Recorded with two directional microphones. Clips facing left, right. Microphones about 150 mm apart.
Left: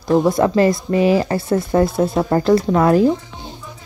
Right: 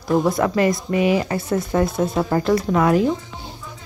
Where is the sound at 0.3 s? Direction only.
30° left (ahead or behind).